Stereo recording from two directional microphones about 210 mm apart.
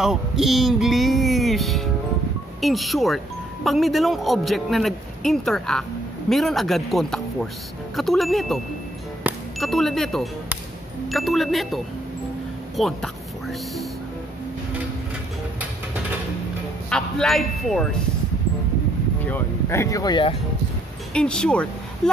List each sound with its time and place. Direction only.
0.0 s music: centre (ahead or behind)
2.6 s a man's voice: centre (ahead or behind)
9.2 s a sound: centre (ahead or behind)
11.1 s a man's voice: centre (ahead or behind)
16.9 s speech: centre (ahead or behind)
19.2 s speech: 10° left (ahead or behind)
21.1 s speech: 5° left (ahead or behind)